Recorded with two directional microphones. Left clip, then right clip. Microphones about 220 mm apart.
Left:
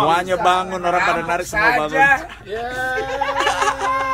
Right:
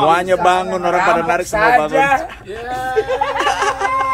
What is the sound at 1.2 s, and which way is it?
Speech, centre (ahead or behind).